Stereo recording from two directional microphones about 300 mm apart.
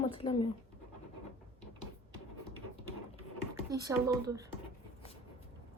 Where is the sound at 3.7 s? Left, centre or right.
Centre.